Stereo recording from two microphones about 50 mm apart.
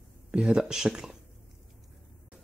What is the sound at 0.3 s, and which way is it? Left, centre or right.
Speech, centre.